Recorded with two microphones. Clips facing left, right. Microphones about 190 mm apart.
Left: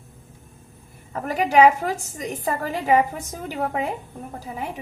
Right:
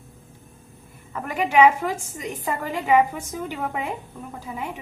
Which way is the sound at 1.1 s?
40° left (ahead or behind).